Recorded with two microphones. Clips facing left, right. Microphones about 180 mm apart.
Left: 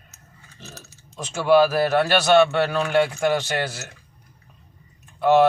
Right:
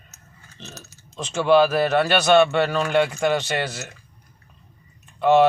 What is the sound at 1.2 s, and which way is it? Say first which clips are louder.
Speech: even; 10° left (ahead or behind).